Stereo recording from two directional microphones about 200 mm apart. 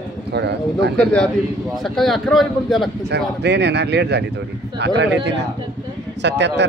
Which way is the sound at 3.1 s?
60° right (ahead or behind).